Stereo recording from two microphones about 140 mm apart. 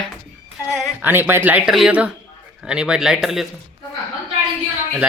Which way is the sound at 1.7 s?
5° right (ahead or behind).